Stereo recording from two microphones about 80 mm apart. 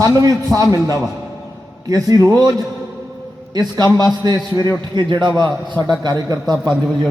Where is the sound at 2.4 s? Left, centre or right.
Right.